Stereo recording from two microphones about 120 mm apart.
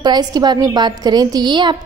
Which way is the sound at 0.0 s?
35° right (ahead or behind).